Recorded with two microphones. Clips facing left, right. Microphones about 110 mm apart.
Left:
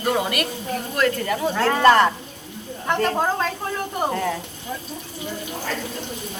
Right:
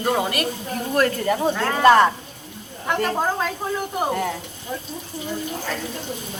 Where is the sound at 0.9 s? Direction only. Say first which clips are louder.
Right 2 dB; 35° right (ahead or behind).